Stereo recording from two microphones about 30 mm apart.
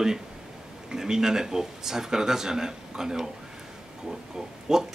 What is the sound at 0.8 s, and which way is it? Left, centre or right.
Speech, centre.